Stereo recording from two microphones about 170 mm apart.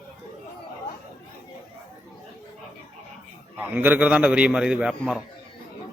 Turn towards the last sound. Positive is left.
turn(degrees=-5)  # may be behind; listen again after turning